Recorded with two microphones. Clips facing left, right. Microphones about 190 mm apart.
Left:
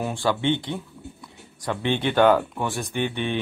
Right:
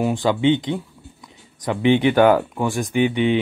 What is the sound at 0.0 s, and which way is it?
Speech, 15° right (ahead or behind).